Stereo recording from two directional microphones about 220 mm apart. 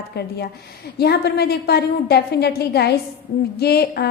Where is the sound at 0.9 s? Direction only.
45° left (ahead or behind).